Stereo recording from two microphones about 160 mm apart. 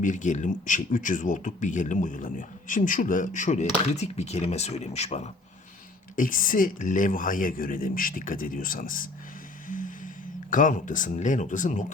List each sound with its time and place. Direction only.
0.0 s speech: 50° left (ahead or behind)
6.1 s speech: 60° left (ahead or behind)
9.6 s vehicle: 55° left (ahead or behind)
10.5 s speech: 55° left (ahead or behind)